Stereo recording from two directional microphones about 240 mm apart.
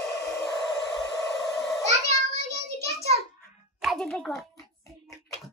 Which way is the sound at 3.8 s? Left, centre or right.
Centre.